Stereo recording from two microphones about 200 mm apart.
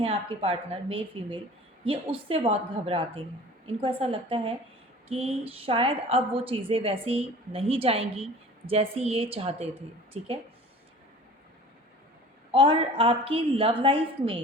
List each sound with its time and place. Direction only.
0.0 s a woman's voice: 30° right (ahead or behind)
12.5 s a woman's voice: 25° right (ahead or behind)